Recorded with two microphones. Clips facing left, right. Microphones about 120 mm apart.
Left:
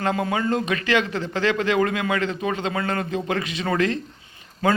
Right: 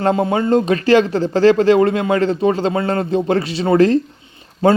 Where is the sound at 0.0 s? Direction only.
30° right (ahead or behind).